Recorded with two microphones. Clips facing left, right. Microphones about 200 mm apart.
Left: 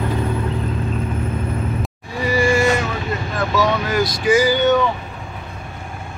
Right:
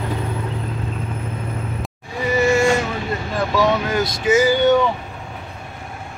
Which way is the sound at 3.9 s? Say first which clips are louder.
Left 1 dB; 25° right (ahead or behind).